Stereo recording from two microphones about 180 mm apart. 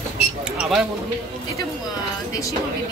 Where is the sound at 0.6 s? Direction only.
Centre (ahead or behind).